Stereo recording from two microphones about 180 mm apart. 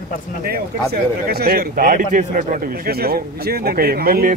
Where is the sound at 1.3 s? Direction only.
60° right (ahead or behind).